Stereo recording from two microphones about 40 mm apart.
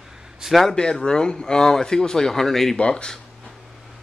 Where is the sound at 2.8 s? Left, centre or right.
Left.